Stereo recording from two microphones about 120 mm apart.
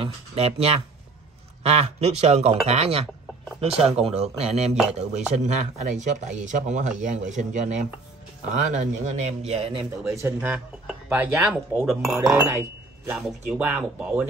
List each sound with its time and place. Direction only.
0.0 s speech: 55° right (ahead or behind)
10.0 s speech: 25° right (ahead or behind)